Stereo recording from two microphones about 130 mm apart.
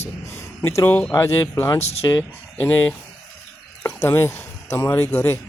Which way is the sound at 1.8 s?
55° left (ahead or behind).